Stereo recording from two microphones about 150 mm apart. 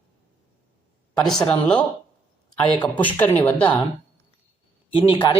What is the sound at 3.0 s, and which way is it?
Speech, 10° left (ahead or behind).